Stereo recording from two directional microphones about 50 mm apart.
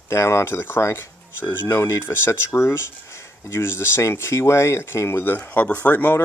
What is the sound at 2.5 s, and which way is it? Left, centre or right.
Speech, left.